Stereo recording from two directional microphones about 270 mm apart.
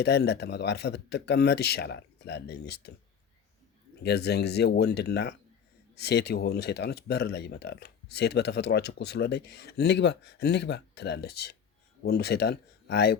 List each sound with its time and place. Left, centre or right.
0.0 s speech: left
4.0 s speech: left